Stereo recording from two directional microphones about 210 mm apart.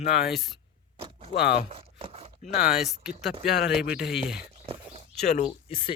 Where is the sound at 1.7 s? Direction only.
25° right (ahead or behind).